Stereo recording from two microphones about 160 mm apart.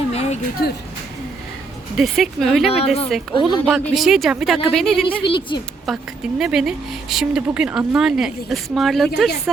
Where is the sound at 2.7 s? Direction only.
40° left (ahead or behind).